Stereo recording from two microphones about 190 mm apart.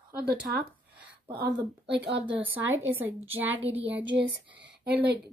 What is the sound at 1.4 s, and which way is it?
Speech, 65° right (ahead or behind).